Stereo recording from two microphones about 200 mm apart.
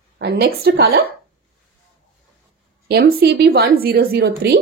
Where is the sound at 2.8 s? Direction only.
55° right (ahead or behind).